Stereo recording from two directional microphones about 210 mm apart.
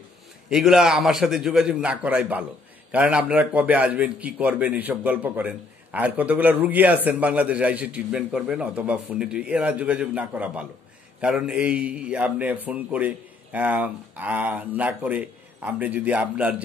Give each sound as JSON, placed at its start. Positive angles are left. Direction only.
{"t": 0.5, "sound": "a man's voice", "side_deg": -5}